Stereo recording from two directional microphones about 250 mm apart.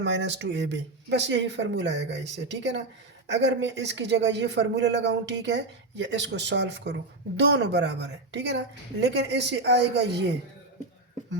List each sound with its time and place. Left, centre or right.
0.0 s speech: right